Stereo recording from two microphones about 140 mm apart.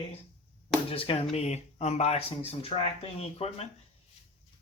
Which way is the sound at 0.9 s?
40° left (ahead or behind).